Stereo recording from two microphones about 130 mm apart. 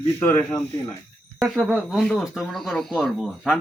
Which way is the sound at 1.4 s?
10° right (ahead or behind).